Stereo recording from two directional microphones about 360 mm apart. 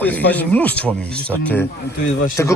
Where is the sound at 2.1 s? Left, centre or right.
Left.